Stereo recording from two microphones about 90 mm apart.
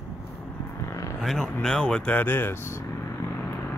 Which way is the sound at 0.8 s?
35° left (ahead or behind).